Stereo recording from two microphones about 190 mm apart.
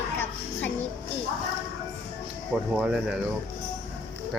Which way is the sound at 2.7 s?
5° right (ahead or behind).